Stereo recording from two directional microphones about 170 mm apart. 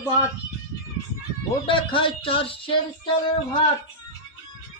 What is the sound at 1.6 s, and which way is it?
Music, 30° left (ahead or behind).